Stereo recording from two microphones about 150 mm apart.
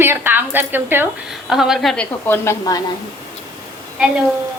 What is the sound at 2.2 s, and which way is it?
Speech, 15° left (ahead or behind).